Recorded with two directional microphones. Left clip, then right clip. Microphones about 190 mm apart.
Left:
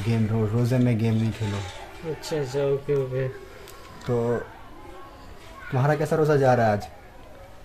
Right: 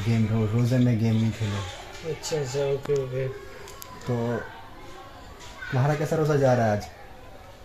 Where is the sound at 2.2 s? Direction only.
35° left (ahead or behind).